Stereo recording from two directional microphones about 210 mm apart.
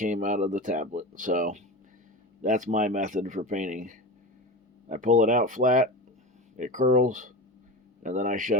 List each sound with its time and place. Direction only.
0.0 s speech: 35° right (ahead or behind)